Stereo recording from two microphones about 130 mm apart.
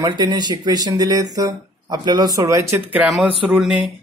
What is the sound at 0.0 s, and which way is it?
Speech, 30° right (ahead or behind).